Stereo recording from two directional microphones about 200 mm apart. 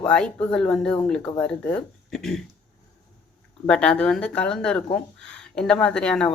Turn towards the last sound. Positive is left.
turn(degrees=5)  # may be behind; listen again after turning